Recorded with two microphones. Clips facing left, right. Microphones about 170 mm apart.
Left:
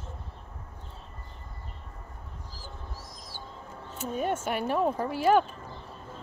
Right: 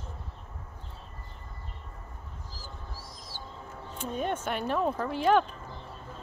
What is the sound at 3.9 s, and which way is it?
Speech, 10° left (ahead or behind).